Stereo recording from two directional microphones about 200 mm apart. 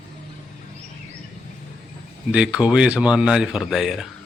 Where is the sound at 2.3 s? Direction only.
5° right (ahead or behind).